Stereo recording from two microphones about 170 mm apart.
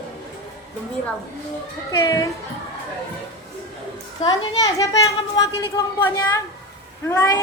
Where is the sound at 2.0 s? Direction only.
20° left (ahead or behind).